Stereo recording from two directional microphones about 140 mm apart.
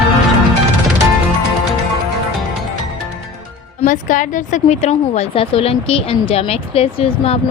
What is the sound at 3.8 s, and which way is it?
A woman's voice, 70° left (ahead or behind).